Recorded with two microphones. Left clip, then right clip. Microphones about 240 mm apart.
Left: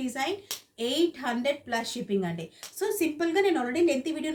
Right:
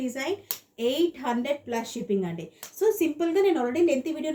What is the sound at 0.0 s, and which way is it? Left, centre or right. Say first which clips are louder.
Speech: right 1 dB; left.